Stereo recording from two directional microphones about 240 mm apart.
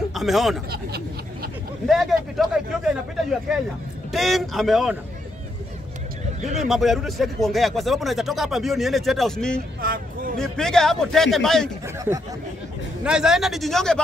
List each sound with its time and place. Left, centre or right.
0.1 s speech: centre
0.7 s speech: right
1.9 s speech: centre
6.7 s speech: centre
9.8 s a sound: right
10.3 s speech: centre
11.8 s speech: centre